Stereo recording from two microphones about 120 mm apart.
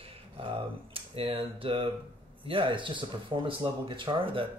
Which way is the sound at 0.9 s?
50° right (ahead or behind).